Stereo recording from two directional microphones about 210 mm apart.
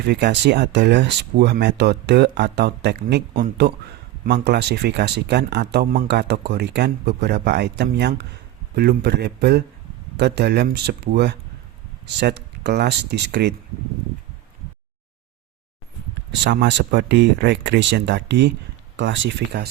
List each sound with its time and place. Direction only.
0.0 s speech: 50° right (ahead or behind)
16.4 s speech: 55° right (ahead or behind)